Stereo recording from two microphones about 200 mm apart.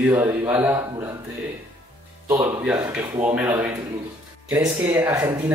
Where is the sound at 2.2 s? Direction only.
5° right (ahead or behind).